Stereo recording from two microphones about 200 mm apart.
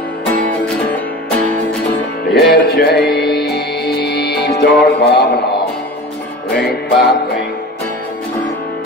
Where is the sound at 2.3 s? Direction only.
55° left (ahead or behind).